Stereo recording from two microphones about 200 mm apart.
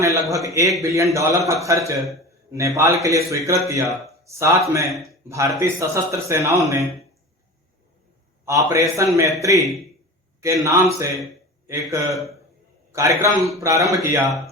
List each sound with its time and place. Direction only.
0.0 s a sound: 15° right (ahead or behind)
0.4 s a man's voice: 15° right (ahead or behind)
4.9 s a man's voice: centre (ahead or behind)
5.3 s a man's voice: 15° right (ahead or behind)
8.4 s a man's voice: 15° right (ahead or behind)